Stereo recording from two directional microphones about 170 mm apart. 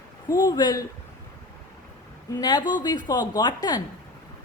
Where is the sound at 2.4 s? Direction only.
25° left (ahead or behind).